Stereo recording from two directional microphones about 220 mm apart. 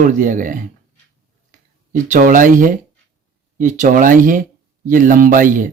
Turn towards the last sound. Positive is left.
turn(degrees=-40)  # may be behind; listen again after turning